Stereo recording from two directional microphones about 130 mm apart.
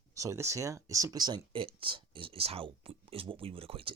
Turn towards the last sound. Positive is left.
turn(degrees=-45)  # may be behind; listen again after turning